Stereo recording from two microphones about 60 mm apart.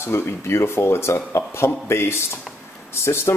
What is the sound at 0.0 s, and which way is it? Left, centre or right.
Speech, left.